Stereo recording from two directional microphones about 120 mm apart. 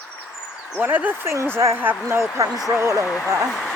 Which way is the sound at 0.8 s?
15° right (ahead or behind).